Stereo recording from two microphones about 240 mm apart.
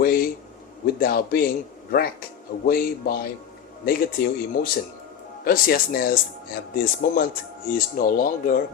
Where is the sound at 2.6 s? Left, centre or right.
Left.